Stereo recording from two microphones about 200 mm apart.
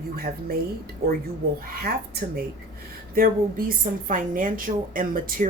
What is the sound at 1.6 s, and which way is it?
Speech, 45° right (ahead or behind).